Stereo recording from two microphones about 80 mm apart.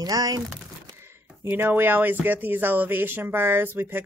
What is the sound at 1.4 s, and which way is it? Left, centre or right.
Speech, right.